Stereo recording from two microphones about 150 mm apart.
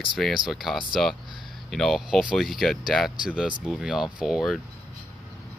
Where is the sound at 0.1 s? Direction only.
Centre (ahead or behind).